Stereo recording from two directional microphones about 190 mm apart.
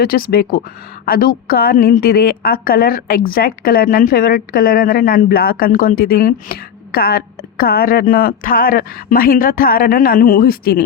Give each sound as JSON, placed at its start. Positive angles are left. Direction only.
{"t": 0.0, "sound": "a woman's voice", "side_deg": 50}